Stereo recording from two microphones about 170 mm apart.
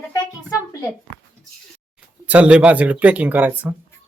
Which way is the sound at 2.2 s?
10° right (ahead or behind).